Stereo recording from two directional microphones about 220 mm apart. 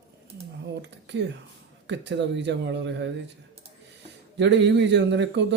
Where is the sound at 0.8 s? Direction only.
55° right (ahead or behind).